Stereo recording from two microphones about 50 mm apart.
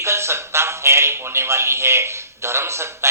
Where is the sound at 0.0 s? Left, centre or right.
Right.